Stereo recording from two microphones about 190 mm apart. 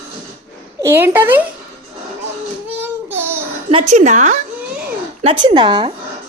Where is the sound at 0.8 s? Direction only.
10° right (ahead or behind).